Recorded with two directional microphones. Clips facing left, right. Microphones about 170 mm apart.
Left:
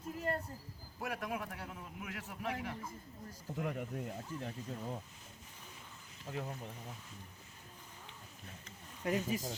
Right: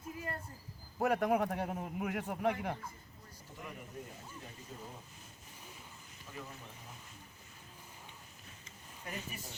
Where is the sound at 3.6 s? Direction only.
65° left (ahead or behind).